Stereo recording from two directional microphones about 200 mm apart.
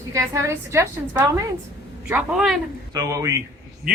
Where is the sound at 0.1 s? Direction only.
15° right (ahead or behind).